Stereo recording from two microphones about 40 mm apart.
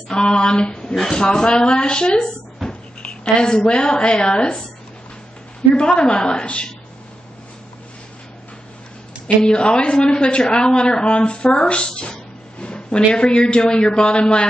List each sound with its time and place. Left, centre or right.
0.1 s speech: left
2.6 s a sound: centre
3.0 s a woman's voice: left
5.8 s speech: left
9.4 s speech: left